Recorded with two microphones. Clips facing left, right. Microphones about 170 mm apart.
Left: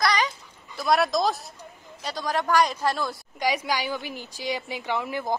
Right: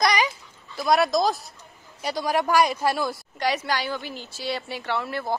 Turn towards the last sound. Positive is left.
turn(degrees=15)  # may be behind; listen again after turning